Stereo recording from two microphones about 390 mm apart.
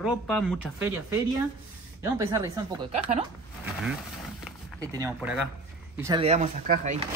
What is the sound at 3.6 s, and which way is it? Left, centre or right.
Speech, centre.